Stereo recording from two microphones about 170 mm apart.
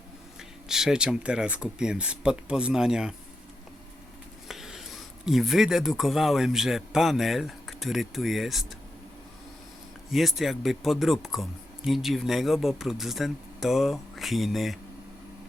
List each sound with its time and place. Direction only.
0.3 s speech: 5° right (ahead or behind)
4.4 s speech: centre (ahead or behind)
10.1 s speech: centre (ahead or behind)